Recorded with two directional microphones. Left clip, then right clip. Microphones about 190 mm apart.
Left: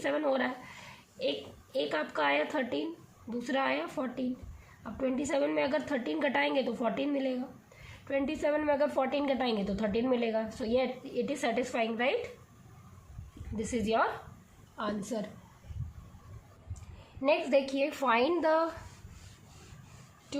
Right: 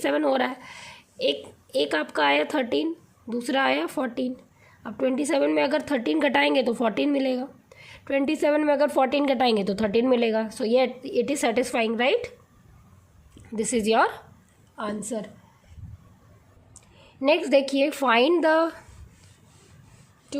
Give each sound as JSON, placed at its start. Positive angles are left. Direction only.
{"t": 0.0, "sound": "a woman's voice", "side_deg": -50}
{"t": 13.6, "sound": "a woman's voice", "side_deg": -50}
{"t": 14.8, "sound": "a woman's voice", "side_deg": -40}
{"t": 17.2, "sound": "a woman's voice", "side_deg": -45}
{"t": 20.3, "sound": "speech", "side_deg": -35}